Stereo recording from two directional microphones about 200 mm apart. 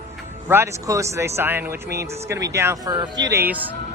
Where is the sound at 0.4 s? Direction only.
10° right (ahead or behind).